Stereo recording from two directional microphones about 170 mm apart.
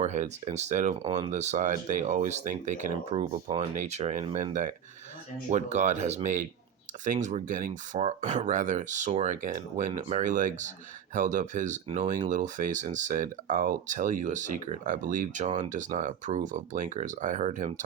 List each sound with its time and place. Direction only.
0.0 s speech: 45° right (ahead or behind)
1.0 s speech: 25° right (ahead or behind)
1.3 s speech: 45° right (ahead or behind)